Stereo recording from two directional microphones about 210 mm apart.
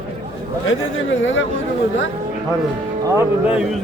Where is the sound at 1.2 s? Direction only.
65° left (ahead or behind).